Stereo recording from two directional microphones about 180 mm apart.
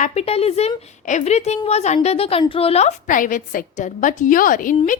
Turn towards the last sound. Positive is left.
turn(degrees=50)  # may be behind; listen again after turning